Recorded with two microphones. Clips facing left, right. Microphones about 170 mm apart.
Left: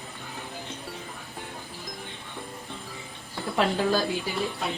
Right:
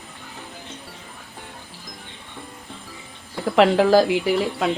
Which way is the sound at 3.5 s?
90° right.